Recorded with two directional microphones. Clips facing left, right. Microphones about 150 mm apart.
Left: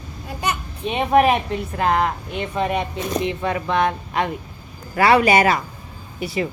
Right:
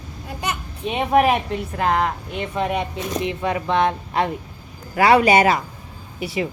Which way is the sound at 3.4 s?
20° right (ahead or behind).